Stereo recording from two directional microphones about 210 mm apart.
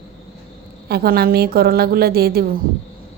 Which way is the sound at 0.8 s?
50° right (ahead or behind).